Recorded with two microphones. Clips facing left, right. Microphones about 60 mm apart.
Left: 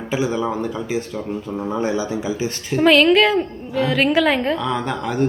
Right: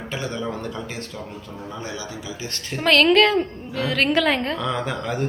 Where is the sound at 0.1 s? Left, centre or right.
Centre.